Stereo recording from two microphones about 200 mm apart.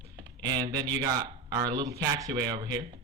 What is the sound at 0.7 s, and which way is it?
Speech, 20° right (ahead or behind).